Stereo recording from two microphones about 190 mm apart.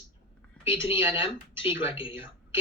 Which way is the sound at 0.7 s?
25° left (ahead or behind).